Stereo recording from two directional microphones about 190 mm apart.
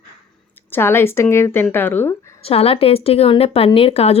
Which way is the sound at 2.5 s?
30° left (ahead or behind).